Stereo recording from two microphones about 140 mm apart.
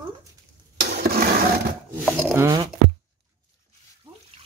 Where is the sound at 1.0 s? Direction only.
90° right.